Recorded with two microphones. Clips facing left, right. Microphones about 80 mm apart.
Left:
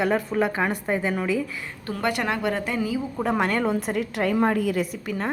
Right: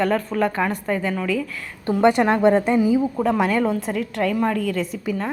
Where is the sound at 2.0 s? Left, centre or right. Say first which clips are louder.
Right 9 dB; right.